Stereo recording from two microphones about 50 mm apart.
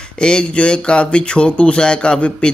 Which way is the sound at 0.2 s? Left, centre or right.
Centre.